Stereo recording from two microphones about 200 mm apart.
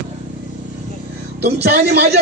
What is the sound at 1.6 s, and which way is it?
Speech, 55° right (ahead or behind).